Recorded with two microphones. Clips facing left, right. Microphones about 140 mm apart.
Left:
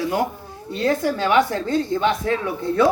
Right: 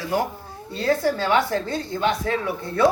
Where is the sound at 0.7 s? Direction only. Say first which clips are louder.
Left 1 dB; 15° left (ahead or behind).